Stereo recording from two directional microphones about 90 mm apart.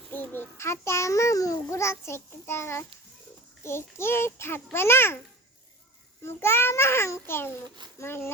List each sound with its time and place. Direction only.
0.1 s a child's voice: 25° left (ahead or behind)
6.2 s a child's voice: 30° left (ahead or behind)